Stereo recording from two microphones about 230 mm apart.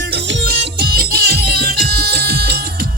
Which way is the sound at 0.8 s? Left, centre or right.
Right.